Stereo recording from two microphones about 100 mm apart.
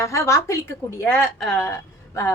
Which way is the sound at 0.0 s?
30° left (ahead or behind).